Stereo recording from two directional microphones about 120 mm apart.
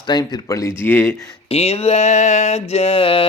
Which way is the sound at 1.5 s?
55° left (ahead or behind).